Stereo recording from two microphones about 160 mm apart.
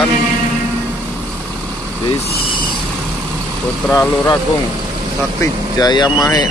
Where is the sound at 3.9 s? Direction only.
20° left (ahead or behind).